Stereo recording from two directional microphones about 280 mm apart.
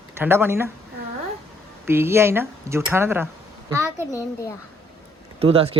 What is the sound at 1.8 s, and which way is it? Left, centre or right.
Speech, centre.